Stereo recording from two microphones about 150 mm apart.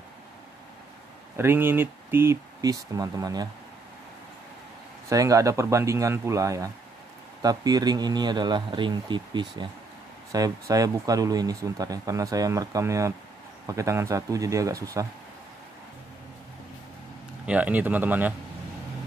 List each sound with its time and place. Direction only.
1.3 s speech: 15° right (ahead or behind)
5.1 s speech: 20° right (ahead or behind)
17.5 s speech: 10° right (ahead or behind)